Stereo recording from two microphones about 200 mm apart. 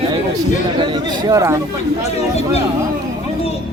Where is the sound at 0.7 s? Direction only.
20° right (ahead or behind).